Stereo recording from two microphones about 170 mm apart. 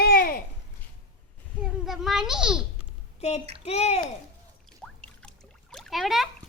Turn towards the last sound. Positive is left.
turn(degrees=0)  # may be behind; listen again after turning